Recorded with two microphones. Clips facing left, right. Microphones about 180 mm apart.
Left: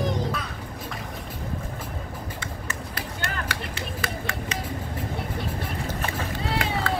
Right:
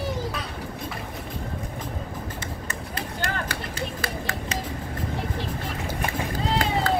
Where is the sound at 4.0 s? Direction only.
35° right (ahead or behind).